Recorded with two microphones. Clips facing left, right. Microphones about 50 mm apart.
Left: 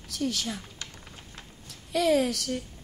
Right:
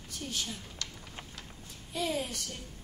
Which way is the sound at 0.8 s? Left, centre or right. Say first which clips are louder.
Even; left.